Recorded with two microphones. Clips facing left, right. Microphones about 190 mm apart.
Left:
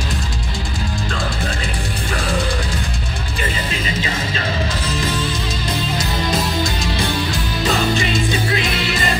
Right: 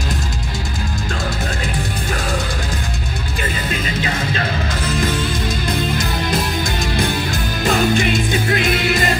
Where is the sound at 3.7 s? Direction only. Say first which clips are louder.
Right 1 dB; 55° right (ahead or behind).